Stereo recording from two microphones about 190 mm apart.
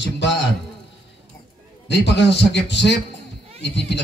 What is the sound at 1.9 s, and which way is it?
A man's voice, 65° left (ahead or behind).